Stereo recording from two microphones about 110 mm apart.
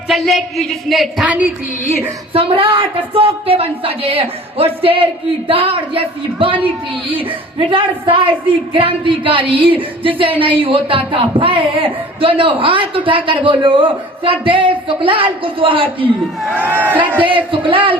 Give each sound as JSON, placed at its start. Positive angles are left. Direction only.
{"t": 0.1, "sound": "speech", "side_deg": 0}
{"t": 1.2, "sound": "speech", "side_deg": -15}
{"t": 2.3, "sound": "a woman's voice", "side_deg": -55}
{"t": 16.6, "sound": "a man's voice", "side_deg": -20}
{"t": 17.2, "sound": "a woman's voice", "side_deg": -50}